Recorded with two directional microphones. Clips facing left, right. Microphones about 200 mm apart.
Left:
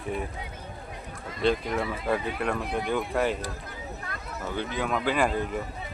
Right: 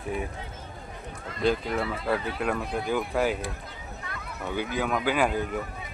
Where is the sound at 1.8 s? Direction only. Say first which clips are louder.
Even; 15° left (ahead or behind).